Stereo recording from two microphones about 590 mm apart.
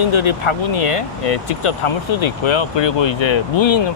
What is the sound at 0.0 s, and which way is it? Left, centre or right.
Speech, left.